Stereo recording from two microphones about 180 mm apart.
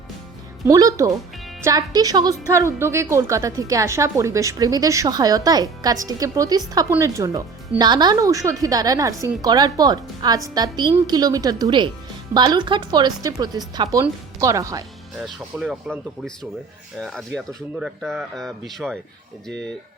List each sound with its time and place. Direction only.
0.6 s a woman's voice: 20° right (ahead or behind)
15.2 s speech: centre (ahead or behind)
17.0 s speech: 5° left (ahead or behind)